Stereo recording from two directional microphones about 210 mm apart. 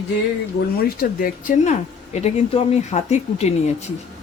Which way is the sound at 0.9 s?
40° left (ahead or behind).